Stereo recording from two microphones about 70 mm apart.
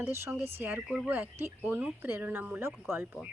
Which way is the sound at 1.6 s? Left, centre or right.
Right.